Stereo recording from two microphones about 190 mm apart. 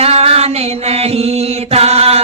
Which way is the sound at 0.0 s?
30° right (ahead or behind).